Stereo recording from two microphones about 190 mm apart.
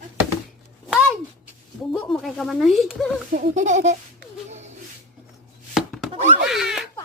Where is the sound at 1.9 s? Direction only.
Centre (ahead or behind).